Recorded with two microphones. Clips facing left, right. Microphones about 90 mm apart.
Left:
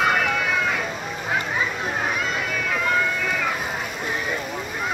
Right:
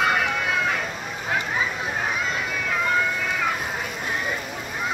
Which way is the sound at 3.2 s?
Centre (ahead or behind).